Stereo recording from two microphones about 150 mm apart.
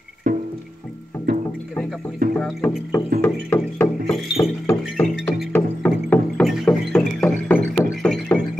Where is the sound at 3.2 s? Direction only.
15° left (ahead or behind).